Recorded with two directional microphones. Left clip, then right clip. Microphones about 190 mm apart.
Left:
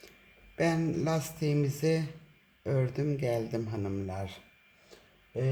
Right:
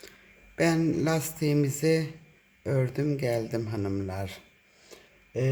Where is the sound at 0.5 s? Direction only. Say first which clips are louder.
Right 4 dB; 20° right (ahead or behind).